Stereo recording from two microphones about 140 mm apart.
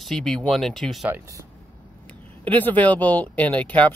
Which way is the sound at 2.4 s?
10° left (ahead or behind).